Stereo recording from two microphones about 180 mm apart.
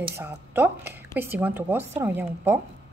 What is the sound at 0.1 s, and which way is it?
Speech, 15° right (ahead or behind).